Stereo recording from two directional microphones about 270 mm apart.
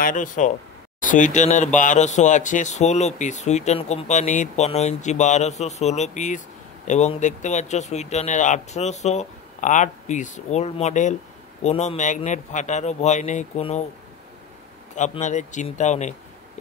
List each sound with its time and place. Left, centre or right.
0.0 s speech: left
15.0 s speech: left